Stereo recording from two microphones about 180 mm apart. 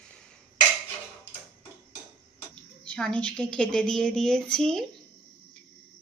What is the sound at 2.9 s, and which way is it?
Speech, 5° left (ahead or behind).